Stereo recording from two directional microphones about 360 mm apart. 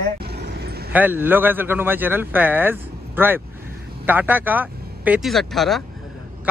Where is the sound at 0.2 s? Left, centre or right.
Right.